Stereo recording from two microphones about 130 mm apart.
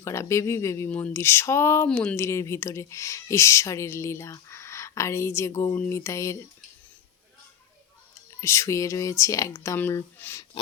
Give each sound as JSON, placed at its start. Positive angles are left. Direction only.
{"t": 0.0, "sound": "speech", "side_deg": 20}
{"t": 0.9, "sound": "speech", "side_deg": 10}
{"t": 8.4, "sound": "speech", "side_deg": 20}